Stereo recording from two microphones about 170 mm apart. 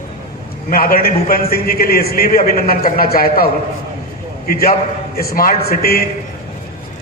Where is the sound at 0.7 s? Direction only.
60° left (ahead or behind).